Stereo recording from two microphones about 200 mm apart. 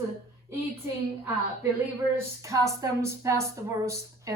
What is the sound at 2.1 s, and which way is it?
A woman's voice, 15° right (ahead or behind).